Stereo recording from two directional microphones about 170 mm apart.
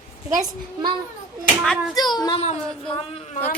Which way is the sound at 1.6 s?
Centre (ahead or behind).